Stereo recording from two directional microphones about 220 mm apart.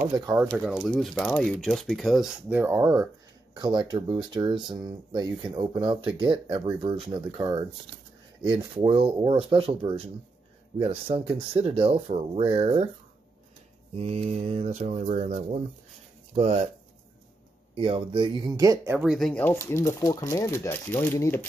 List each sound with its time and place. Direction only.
0.1 s speech: 15° right (ahead or behind)
0.5 s speech: centre (ahead or behind); by 12.8 s 25° right (ahead or behind)
13.9 s speech: 30° right (ahead or behind)
17.7 s speech: 25° right (ahead or behind)
18.9 s speech: centre (ahead or behind)